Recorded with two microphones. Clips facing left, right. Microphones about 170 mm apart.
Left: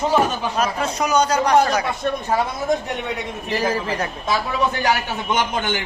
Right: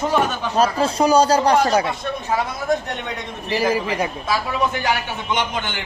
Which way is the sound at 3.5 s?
10° right (ahead or behind).